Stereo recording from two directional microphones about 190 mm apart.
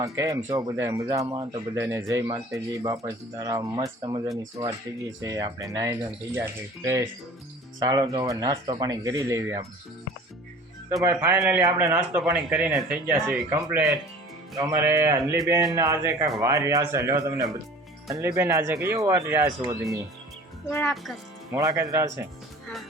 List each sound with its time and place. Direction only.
0.0 s speech: 15° right (ahead or behind)
11.0 s speech: 10° right (ahead or behind)
20.7 s a child's voice: 10° left (ahead or behind)
20.9 s speech: centre (ahead or behind)
21.5 s speech: 15° right (ahead or behind)